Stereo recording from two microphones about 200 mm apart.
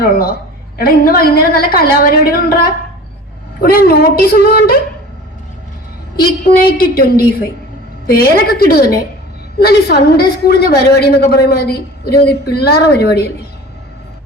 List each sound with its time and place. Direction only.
0.0 s a woman's voice: 50° left (ahead or behind)
3.6 s a woman's voice: 50° left (ahead or behind)
6.1 s a woman's voice: 50° left (ahead or behind)